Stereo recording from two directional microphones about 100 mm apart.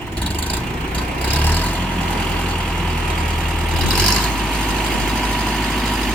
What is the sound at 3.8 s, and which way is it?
Vehicle, 10° left (ahead or behind).